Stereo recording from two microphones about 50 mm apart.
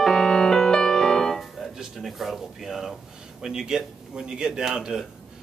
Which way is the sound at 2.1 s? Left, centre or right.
Centre.